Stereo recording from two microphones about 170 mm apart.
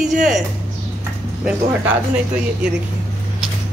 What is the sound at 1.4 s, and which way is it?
Speech, 10° right (ahead or behind).